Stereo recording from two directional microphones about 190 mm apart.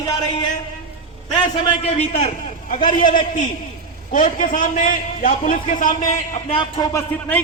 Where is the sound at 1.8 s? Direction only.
30° left (ahead or behind).